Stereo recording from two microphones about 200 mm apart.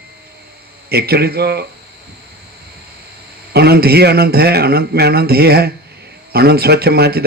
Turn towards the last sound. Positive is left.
turn(degrees=-50)  # may be behind; listen again after turning